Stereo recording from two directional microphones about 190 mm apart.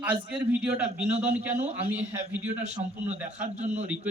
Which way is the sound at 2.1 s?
10° right (ahead or behind).